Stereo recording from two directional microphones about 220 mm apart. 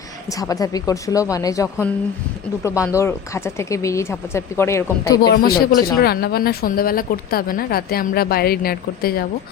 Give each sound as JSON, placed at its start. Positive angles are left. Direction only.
{"t": 0.3, "sound": "speech", "side_deg": 15}
{"t": 5.3, "sound": "speech", "side_deg": 45}